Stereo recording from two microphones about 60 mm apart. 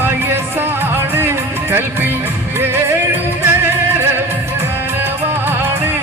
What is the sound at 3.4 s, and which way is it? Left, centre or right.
Music, right.